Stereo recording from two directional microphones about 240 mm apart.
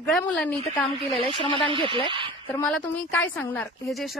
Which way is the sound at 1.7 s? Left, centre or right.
Right.